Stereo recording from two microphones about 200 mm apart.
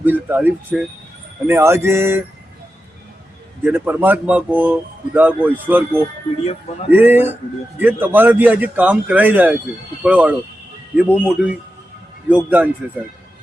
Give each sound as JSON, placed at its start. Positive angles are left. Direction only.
{"t": 0.0, "sound": "speech", "side_deg": -10}
{"t": 3.6, "sound": "speech", "side_deg": -10}
{"t": 6.4, "sound": "speech", "side_deg": 30}
{"t": 6.9, "sound": "speech", "side_deg": -10}